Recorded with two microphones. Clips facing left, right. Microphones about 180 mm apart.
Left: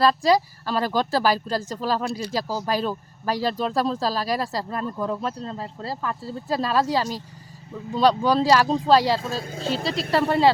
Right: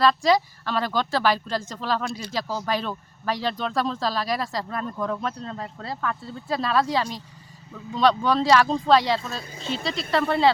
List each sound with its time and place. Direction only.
0.0 s speech: 35° left (ahead or behind)
4.9 s speech: 5° left (ahead or behind)
5.2 s speech: 30° left (ahead or behind)